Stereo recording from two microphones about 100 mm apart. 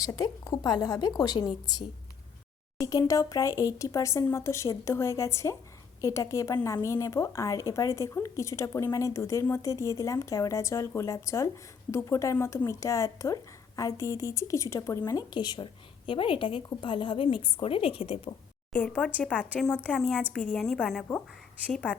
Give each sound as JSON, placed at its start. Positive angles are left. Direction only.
{"t": 0.5, "sound": "a woman's voice", "side_deg": 40}
{"t": 2.8, "sound": "a woman's voice", "side_deg": 35}
{"t": 18.7, "sound": "a woman's voice", "side_deg": 15}